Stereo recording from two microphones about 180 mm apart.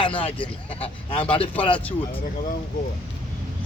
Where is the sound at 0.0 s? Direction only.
30° left (ahead or behind).